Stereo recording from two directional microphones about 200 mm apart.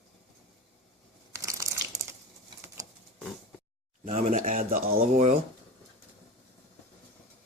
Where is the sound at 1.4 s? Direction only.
15° right (ahead or behind).